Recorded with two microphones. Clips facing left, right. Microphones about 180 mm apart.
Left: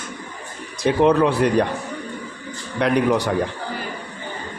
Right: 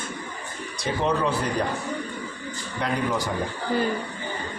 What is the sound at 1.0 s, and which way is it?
Speech, 65° left (ahead or behind).